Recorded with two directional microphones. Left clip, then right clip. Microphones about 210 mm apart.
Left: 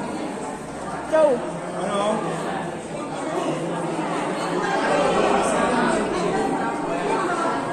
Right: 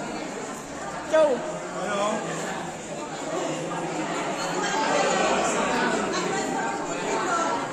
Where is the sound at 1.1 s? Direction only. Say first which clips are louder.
Left 2 dB; 10° right (ahead or behind).